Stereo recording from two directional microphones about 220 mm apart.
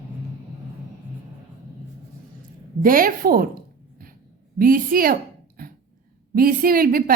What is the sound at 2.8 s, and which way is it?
A woman's voice, 40° right (ahead or behind).